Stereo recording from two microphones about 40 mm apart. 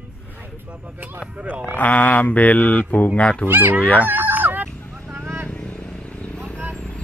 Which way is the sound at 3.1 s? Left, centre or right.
Left.